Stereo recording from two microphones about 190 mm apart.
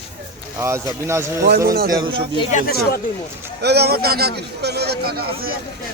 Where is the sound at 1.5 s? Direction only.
55° right (ahead or behind).